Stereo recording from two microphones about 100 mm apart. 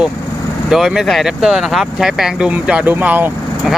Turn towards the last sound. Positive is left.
turn(degrees=-20)  # may be behind; listen again after turning